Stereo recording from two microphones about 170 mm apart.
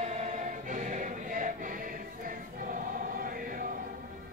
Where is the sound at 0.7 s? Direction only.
50° right (ahead or behind).